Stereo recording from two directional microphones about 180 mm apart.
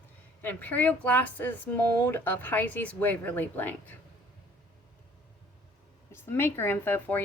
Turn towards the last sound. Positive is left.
turn(degrees=10)  # may be behind; listen again after turning